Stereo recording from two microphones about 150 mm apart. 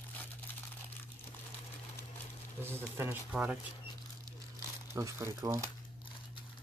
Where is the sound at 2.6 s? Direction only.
15° right (ahead or behind).